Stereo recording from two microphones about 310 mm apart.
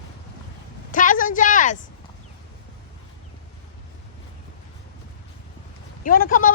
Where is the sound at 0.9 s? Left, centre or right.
Left.